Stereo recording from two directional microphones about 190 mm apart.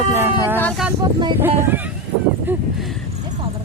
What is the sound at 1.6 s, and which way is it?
Speech, 10° right (ahead or behind).